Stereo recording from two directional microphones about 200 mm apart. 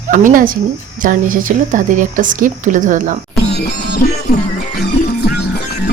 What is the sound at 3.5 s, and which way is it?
Music, 55° left (ahead or behind).